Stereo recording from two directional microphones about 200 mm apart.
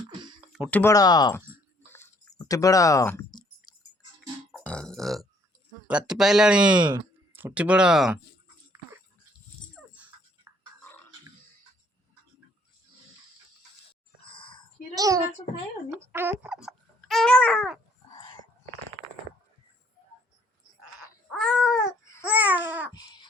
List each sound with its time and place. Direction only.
0.5 s speech: centre (ahead or behind)
0.8 s speech: 15° left (ahead or behind)
2.5 s a sound: 15° left (ahead or behind)
4.5 s burping: 5° left (ahead or behind)
5.9 s speech: 5° right (ahead or behind)
14.3 s a sound: 25° left (ahead or behind)
14.9 s babbling: 15° right (ahead or behind)
15.9 s speech: 10° right (ahead or behind); by 17.7 s 5° left (ahead or behind)
21.3 s babbling: centre (ahead or behind)
22.9 s a sound: 20° left (ahead or behind)